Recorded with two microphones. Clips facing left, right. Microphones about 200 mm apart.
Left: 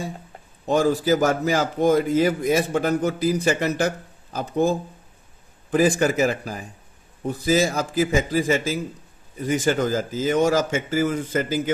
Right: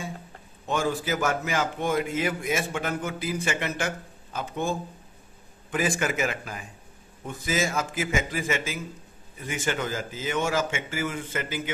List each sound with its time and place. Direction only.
0.7 s a man's voice: 35° left (ahead or behind)